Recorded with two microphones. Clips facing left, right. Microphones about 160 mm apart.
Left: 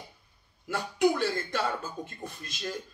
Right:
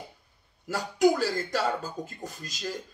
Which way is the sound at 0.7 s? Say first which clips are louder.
Right 3 dB; 40° right (ahead or behind).